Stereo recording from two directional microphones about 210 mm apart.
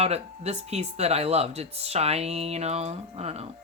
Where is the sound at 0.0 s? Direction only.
30° right (ahead or behind).